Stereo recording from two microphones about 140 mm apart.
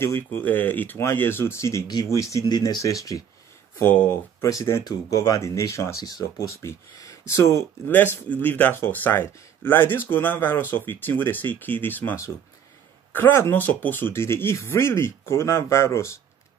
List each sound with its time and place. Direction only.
0.0 s speech: 15° left (ahead or behind)
3.8 s speech: 15° left (ahead or behind)